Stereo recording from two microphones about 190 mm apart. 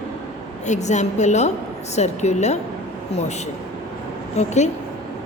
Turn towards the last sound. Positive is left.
turn(degrees=35)  # may be behind; listen again after turning